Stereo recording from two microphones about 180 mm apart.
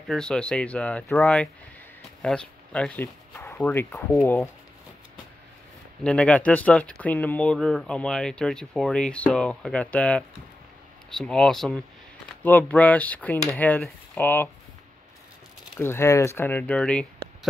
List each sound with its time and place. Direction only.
0.1 s speech: 5° left (ahead or behind)
6.0 s speech: 5° left (ahead or behind)
15.8 s speech: 15° left (ahead or behind)